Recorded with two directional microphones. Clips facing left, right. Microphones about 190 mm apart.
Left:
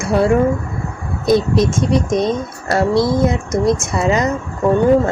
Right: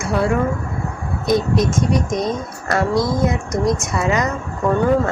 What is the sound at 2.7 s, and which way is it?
Speech, 30° left (ahead or behind).